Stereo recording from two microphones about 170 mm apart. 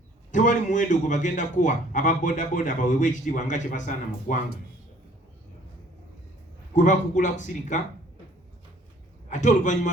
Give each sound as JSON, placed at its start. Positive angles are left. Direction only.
{"t": 0.3, "sound": "a man's voice", "side_deg": 45}
{"t": 6.7, "sound": "a man's voice", "side_deg": 45}
{"t": 9.3, "sound": "a man's voice", "side_deg": 45}